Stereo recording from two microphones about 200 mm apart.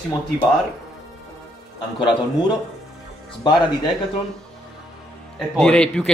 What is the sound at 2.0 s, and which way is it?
Speech, 20° left (ahead or behind).